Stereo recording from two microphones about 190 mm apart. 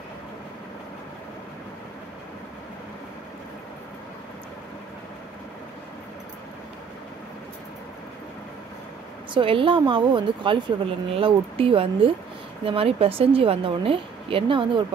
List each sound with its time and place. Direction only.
9.3 s a woman's voice: 25° right (ahead or behind)